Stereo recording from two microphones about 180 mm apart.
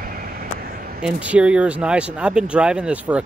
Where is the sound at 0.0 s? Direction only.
55° right (ahead or behind).